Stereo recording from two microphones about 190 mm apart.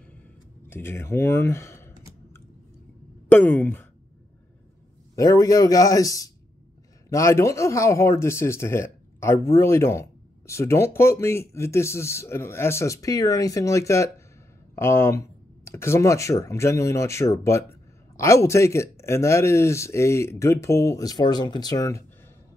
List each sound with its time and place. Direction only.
0.7 s speech: 10° left (ahead or behind)
3.3 s speech: 10° left (ahead or behind)
5.1 s speech: 15° left (ahead or behind)